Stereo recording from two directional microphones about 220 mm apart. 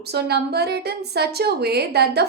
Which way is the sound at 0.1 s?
45° right (ahead or behind).